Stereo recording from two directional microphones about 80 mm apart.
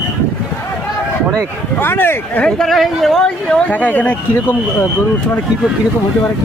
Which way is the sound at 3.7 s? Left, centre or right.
Left.